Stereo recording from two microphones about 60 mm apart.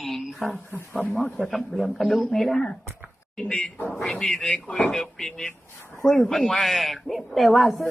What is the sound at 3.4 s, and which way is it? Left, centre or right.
A woman's voice, centre.